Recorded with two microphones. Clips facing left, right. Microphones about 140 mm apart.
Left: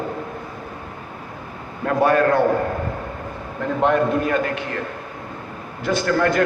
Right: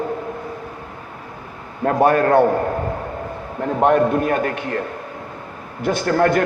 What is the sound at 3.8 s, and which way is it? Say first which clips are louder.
Speech: right 3 dB; 50° right (ahead or behind).